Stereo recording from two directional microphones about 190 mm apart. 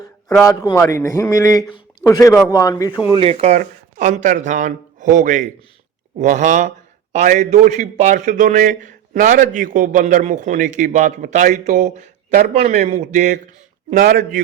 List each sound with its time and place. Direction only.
0.4 s a man's voice: 20° left (ahead or behind)
3.1 s a man's voice: 30° right (ahead or behind); by 14.4 s 45° right (ahead or behind)